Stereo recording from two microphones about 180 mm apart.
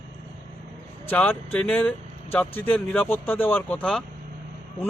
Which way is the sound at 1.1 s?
10° left (ahead or behind).